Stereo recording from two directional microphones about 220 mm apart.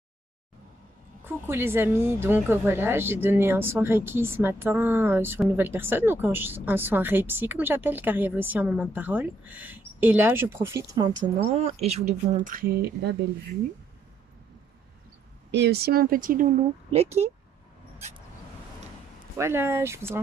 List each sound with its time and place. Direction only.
1.2 s a woman's voice: 10° right (ahead or behind); by 13.1 s 45° right (ahead or behind)
15.5 s speech: 50° right (ahead or behind)
16.9 s speech: 30° right (ahead or behind)
19.3 s a woman's voice: 10° right (ahead or behind)